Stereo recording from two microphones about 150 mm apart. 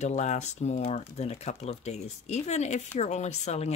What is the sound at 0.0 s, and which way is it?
Speech, 50° left (ahead or behind).